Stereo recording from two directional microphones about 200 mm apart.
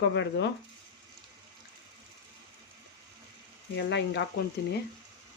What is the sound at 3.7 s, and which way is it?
Speech, 60° left (ahead or behind).